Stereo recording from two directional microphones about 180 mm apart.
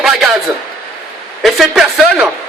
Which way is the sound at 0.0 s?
Centre (ahead or behind).